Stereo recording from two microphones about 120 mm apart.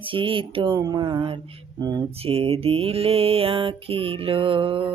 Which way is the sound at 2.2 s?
55° right (ahead or behind).